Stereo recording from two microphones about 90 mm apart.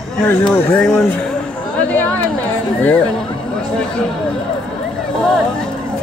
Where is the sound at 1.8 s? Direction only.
15° left (ahead or behind).